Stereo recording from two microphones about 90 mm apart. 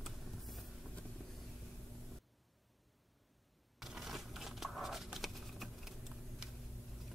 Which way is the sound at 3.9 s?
Centre (ahead or behind).